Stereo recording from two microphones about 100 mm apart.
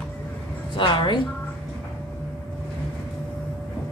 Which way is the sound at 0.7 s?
50° left (ahead or behind).